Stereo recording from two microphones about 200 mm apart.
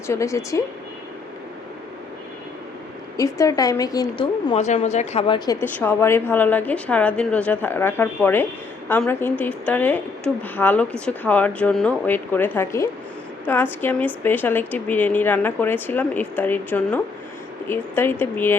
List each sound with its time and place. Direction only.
0.1 s a woman's voice: 15° left (ahead or behind)
3.2 s a woman's voice: 15° left (ahead or behind)
4.5 s a woman's voice: 35° left (ahead or behind)
5.5 s a woman's voice: 10° left (ahead or behind)